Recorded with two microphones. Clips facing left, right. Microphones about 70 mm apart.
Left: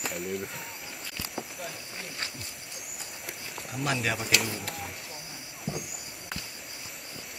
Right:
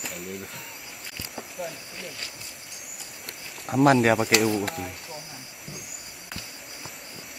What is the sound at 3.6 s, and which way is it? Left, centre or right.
Speech, right.